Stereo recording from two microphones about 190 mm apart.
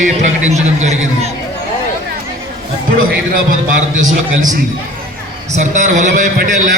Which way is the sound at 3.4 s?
45° right (ahead or behind).